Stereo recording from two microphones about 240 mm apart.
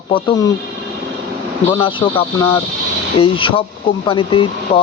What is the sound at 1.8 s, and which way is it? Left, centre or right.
Speech, left.